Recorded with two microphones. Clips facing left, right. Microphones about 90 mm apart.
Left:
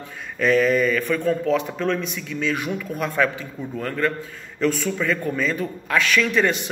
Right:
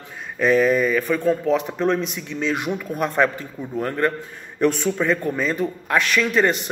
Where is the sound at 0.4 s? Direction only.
15° right (ahead or behind).